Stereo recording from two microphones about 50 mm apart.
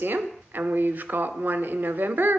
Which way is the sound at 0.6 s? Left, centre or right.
Right.